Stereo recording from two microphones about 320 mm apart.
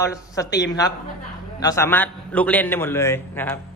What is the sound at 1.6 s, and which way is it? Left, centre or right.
A man's voice, centre.